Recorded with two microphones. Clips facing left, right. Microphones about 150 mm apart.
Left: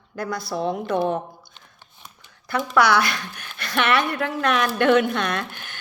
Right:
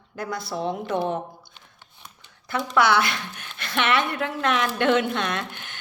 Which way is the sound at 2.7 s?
20° right (ahead or behind).